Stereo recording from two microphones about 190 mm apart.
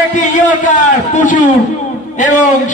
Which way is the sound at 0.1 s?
40° left (ahead or behind).